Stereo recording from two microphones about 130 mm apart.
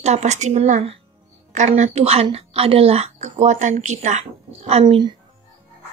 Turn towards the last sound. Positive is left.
turn(degrees=-40)  # may be behind; listen again after turning